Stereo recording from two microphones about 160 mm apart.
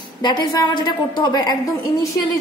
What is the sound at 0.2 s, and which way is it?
A woman's voice, 25° left (ahead or behind).